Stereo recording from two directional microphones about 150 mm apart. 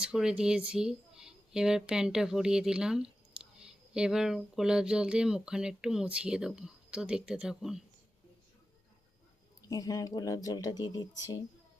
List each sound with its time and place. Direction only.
0.0 s speech: 5° right (ahead or behind)
9.6 s speech: 25° left (ahead or behind)